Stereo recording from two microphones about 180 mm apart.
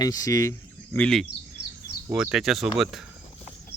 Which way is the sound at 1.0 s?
Centre (ahead or behind).